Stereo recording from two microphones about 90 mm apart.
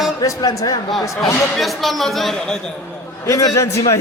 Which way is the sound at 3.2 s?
35° left (ahead or behind).